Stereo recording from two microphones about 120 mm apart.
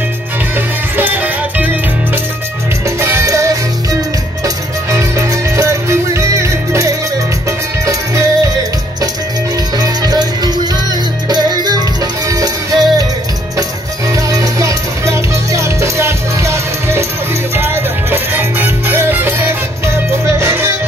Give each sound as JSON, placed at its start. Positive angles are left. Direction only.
{"t": 0.9, "sound": "music", "side_deg": -15}
{"t": 3.0, "sound": "music", "side_deg": -20}
{"t": 4.9, "sound": "music", "side_deg": -25}
{"t": 9.8, "sound": "music", "side_deg": -35}
{"t": 14.1, "sound": "music", "side_deg": -30}